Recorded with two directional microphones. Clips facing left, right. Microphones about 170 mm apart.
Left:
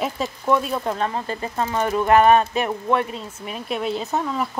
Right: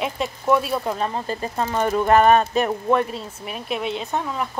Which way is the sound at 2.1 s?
40° right (ahead or behind).